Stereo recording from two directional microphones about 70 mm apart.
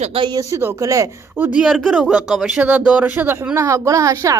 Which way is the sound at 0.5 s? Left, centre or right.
Right.